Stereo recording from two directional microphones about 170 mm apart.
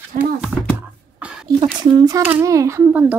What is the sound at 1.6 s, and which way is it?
A child's voice, 25° right (ahead or behind).